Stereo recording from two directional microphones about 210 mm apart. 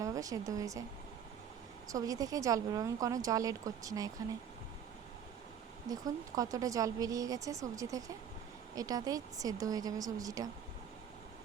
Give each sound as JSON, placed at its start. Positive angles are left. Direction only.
{"t": 0.0, "sound": "speech", "side_deg": -15}
{"t": 1.9, "sound": "speech", "side_deg": -15}
{"t": 5.9, "sound": "speech", "side_deg": -15}